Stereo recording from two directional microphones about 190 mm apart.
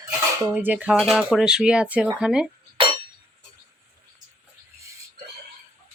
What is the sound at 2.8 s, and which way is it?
Chink, 30° right (ahead or behind).